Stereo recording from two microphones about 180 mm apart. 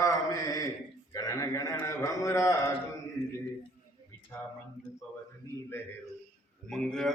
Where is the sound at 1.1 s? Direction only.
20° left (ahead or behind).